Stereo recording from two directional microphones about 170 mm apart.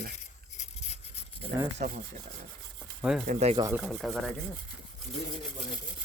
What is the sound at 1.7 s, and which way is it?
Rub, 50° right (ahead or behind).